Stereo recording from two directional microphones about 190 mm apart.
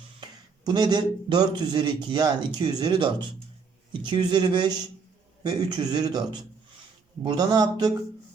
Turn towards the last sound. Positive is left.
turn(degrees=-20)  # may be behind; listen again after turning